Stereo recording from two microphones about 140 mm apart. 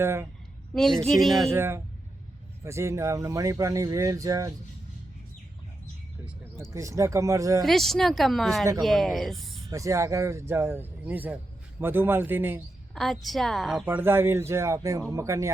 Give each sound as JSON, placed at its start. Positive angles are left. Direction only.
{"t": 0.0, "sound": "speech", "side_deg": -15}
{"t": 0.7, "sound": "a woman's voice", "side_deg": 0}
{"t": 1.5, "sound": "speech", "side_deg": -15}
{"t": 6.7, "sound": "speech", "side_deg": -20}
{"t": 7.6, "sound": "a woman's voice", "side_deg": 0}
{"t": 9.6, "sound": "speech", "side_deg": -25}
{"t": 12.9, "sound": "a woman's voice", "side_deg": 0}
{"t": 13.8, "sound": "speech", "side_deg": -15}